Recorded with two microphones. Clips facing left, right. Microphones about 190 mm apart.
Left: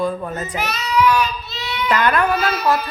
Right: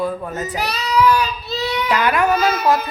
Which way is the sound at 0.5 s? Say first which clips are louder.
Right 1 dB; 35° right (ahead or behind).